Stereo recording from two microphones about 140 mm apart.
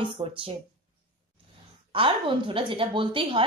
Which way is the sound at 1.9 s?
40° right (ahead or behind).